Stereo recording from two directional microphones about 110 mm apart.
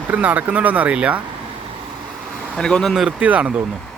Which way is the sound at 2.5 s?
5° left (ahead or behind).